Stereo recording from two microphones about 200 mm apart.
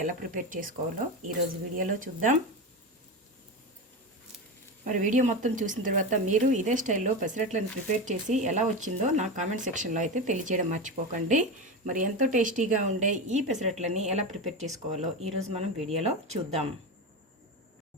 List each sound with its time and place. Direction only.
0.0 s speech: 40° right (ahead or behind)
4.9 s speech: 40° right (ahead or behind)